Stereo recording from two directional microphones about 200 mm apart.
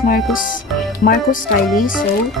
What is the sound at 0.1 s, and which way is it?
A woman's voice, 45° left (ahead or behind).